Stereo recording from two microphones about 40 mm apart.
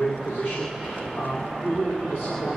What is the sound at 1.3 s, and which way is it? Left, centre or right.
Speech, centre.